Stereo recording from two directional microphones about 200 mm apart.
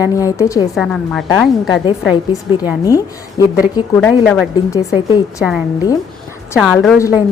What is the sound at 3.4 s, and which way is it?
A woman's voice, 20° left (ahead or behind).